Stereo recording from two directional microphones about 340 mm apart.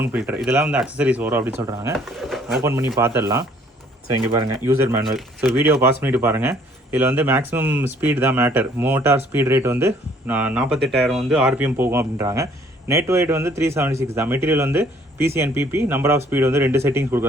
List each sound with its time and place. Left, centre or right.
0.0 s speech: centre